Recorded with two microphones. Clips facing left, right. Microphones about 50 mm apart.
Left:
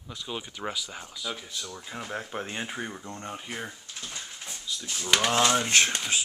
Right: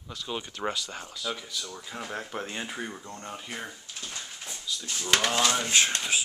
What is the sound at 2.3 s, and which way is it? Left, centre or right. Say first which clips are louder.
Speech: left 1 dB; centre.